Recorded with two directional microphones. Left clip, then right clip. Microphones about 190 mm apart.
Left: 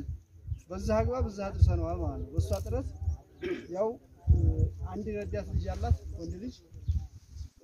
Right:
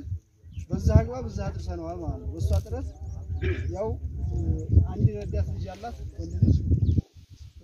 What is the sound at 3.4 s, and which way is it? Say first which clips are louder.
Speech: right 2 dB; 65° left (ahead or behind).